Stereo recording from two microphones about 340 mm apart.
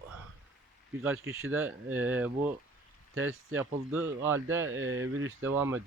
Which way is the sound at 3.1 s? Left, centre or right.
Right.